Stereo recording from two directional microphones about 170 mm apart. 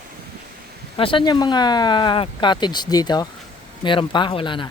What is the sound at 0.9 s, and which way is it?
Speech, 30° left (ahead or behind).